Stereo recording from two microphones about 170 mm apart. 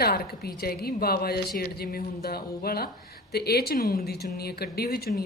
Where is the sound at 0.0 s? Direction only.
65° left (ahead or behind).